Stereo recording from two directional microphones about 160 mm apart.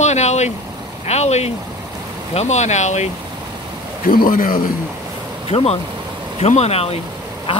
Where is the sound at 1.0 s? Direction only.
45° left (ahead or behind).